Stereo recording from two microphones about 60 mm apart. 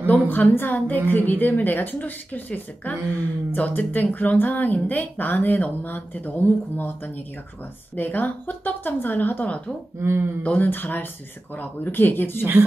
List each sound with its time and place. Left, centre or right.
0.0 s speech: left
7.9 s speech: left
9.9 s speech: right
10.4 s speech: left
10.7 s speech: left